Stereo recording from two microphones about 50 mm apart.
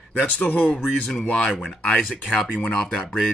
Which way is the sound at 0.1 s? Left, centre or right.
Left.